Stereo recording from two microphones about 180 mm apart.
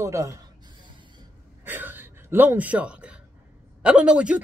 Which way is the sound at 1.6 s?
10° right (ahead or behind).